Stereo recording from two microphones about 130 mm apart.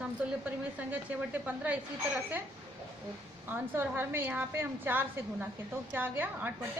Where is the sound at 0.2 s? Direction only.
10° right (ahead or behind).